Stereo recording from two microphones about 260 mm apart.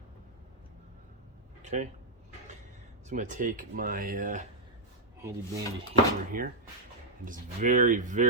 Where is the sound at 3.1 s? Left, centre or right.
Right.